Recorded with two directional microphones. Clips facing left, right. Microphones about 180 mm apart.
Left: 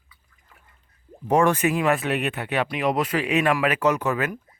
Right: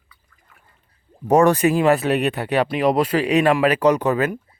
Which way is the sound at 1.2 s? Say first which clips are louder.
Right 5 dB; 40° right (ahead or behind).